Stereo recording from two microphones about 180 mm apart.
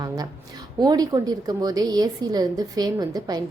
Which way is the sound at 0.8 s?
20° right (ahead or behind).